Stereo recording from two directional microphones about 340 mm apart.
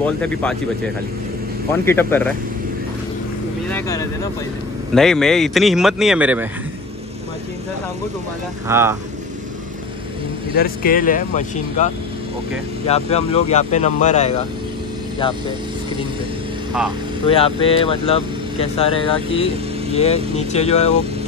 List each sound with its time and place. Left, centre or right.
0.0 s speech: centre
1.9 s speech: centre
4.9 s speech: centre
8.6 s speech: centre
10.6 s speech: left
17.4 s speech: centre